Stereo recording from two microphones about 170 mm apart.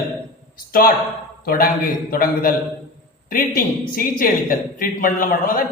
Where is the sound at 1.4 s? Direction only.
60° left (ahead or behind).